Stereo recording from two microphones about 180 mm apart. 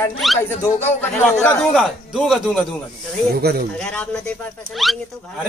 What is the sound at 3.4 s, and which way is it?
Speech, 60° right (ahead or behind).